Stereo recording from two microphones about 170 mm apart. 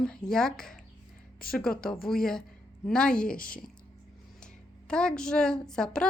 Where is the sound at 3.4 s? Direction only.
55° left (ahead or behind).